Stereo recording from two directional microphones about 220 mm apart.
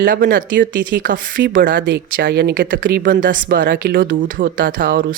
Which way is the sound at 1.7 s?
50° right (ahead or behind).